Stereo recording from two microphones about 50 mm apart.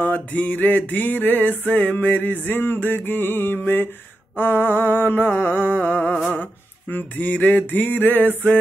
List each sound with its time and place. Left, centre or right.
0.0 s music: left
2.4 s mantra: left
5.4 s music: left
5.9 s humming: left
6.4 s a sound: left